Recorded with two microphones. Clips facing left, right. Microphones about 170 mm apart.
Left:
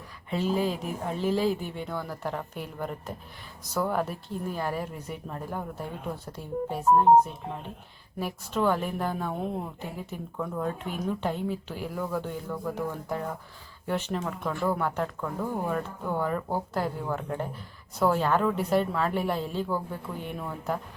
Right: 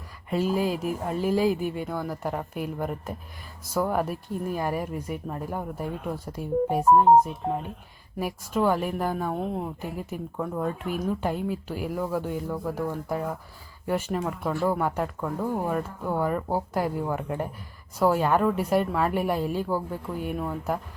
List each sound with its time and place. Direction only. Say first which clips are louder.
0.3 s speech: right 2 dB; 5° right (ahead or behind)
8.2 s speech: right 2 dB; 10° right (ahead or behind)
10.3 s speech: right 2 dB; 15° right (ahead or behind)
10.6 s speech: right 3 dB; 5° right (ahead or behind)